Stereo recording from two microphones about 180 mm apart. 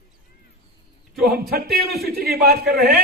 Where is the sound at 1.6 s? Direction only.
Centre (ahead or behind).